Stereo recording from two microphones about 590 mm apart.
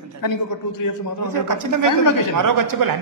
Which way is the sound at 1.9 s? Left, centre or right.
Left.